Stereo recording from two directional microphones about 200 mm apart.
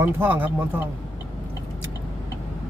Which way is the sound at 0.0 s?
10° right (ahead or behind).